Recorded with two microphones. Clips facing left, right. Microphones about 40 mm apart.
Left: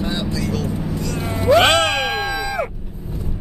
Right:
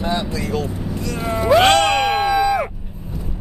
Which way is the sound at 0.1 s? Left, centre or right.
Right.